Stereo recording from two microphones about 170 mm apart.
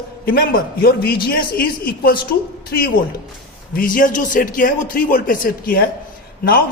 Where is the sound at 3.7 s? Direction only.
55° left (ahead or behind).